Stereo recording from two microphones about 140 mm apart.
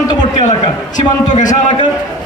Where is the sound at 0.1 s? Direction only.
30° left (ahead or behind).